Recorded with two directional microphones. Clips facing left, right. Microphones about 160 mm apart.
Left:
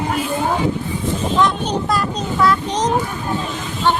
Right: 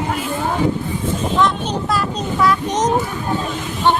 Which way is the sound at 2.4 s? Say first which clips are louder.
Right 1 dB; 20° right (ahead or behind).